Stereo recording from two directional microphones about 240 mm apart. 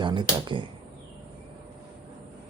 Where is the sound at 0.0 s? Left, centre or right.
Centre.